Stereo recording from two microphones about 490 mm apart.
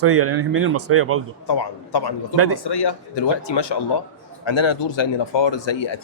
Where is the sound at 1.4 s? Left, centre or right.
Left.